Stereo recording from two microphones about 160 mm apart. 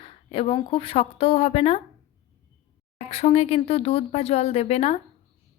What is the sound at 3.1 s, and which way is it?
A woman's voice, 40° left (ahead or behind).